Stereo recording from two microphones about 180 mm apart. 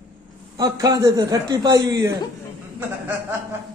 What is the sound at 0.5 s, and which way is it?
Speech, 20° right (ahead or behind).